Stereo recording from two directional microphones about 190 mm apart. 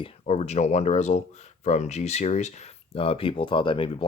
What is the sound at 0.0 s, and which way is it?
Speech, 35° left (ahead or behind).